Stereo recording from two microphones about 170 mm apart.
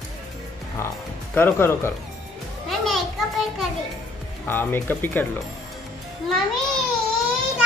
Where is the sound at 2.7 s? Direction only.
Centre (ahead or behind).